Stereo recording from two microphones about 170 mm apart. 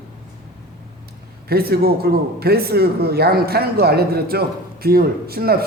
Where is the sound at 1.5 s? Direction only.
65° right (ahead or behind).